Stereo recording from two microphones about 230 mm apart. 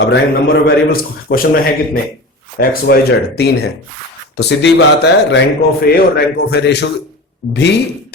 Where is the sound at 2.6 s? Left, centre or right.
Left.